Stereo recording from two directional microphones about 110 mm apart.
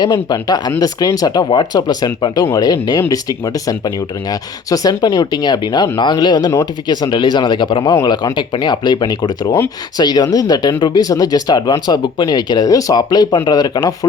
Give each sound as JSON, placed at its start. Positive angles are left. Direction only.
{"t": 0.0, "sound": "speech", "side_deg": 40}